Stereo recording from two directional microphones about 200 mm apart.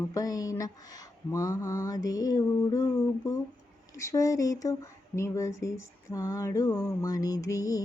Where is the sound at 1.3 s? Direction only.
15° left (ahead or behind).